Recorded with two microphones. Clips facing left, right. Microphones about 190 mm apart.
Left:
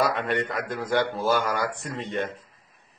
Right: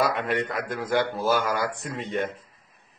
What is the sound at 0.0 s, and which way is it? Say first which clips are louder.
Speech: even; centre (ahead or behind).